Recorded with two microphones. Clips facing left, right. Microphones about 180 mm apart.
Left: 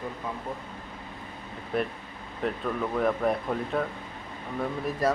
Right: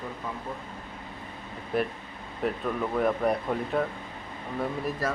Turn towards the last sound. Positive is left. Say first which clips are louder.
# left 5 dB
turn(degrees=20)  # may be behind; listen again after turning